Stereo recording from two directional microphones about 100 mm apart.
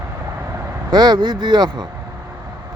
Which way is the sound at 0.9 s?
45° right (ahead or behind).